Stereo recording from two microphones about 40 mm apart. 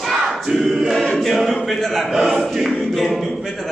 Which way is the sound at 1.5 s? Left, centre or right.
Centre.